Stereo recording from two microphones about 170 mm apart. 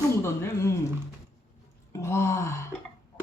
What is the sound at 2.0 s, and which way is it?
Speech, 15° left (ahead or behind).